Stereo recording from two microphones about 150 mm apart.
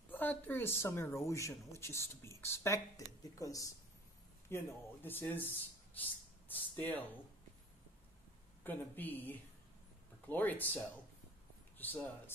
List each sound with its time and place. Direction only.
0.1 s speech: 10° left (ahead or behind)
8.6 s speech: 10° left (ahead or behind)